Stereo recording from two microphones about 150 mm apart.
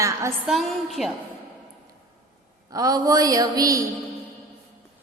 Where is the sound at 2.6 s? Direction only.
25° right (ahead or behind).